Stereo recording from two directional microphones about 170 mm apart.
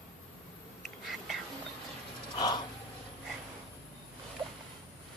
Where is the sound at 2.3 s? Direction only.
25° left (ahead or behind).